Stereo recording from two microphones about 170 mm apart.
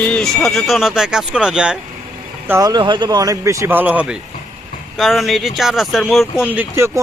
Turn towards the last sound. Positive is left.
turn(degrees=-15)  # may be behind; listen again after turning